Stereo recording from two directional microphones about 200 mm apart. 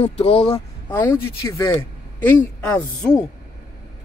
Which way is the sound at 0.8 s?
10° left (ahead or behind).